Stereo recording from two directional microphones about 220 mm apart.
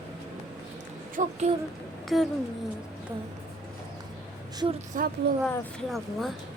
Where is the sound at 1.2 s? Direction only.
35° right (ahead or behind).